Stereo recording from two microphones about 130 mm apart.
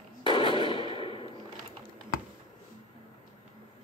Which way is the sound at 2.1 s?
90° left.